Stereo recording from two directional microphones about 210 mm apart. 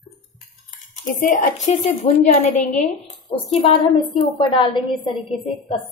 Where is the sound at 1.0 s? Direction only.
40° left (ahead or behind).